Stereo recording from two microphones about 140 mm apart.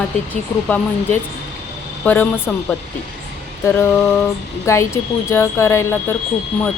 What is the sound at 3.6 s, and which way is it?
Speech, 15° left (ahead or behind).